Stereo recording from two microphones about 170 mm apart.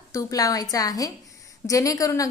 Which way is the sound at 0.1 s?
20° left (ahead or behind).